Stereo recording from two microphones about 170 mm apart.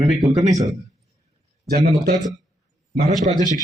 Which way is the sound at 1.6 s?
65° right (ahead or behind).